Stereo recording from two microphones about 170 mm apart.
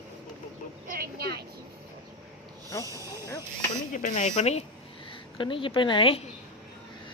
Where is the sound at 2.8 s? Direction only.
20° right (ahead or behind).